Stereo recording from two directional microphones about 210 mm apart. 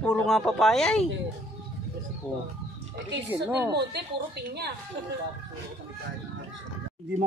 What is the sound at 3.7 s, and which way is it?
A woman's voice, 50° right (ahead or behind).